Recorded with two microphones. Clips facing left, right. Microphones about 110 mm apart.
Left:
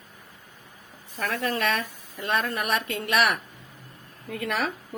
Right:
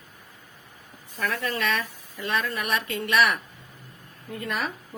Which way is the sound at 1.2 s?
45° left (ahead or behind).